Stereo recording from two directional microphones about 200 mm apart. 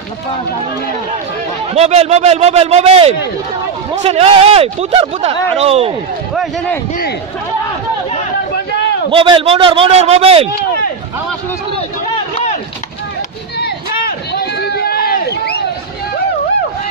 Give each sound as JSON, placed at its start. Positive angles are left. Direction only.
{"t": 1.8, "sound": "speech", "side_deg": -30}
{"t": 9.1, "sound": "a man's voice", "side_deg": -25}
{"t": 13.6, "sound": "a sound", "side_deg": 50}